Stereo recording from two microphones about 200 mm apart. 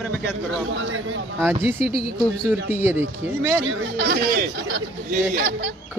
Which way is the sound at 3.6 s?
85° right.